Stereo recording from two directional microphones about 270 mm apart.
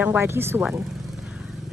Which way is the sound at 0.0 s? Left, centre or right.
Centre.